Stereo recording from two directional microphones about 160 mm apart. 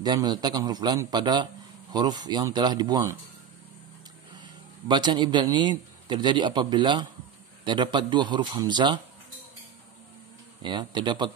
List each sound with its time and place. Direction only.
0.0 s a man's voice: 25° right (ahead or behind)
4.4 s a man's voice: 30° right (ahead or behind)
10.6 s a man's voice: 30° right (ahead or behind)